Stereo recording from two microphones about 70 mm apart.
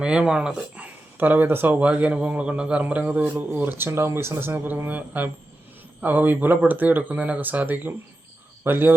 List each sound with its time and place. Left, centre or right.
0.0 s speech: centre
0.8 s a man's voice: right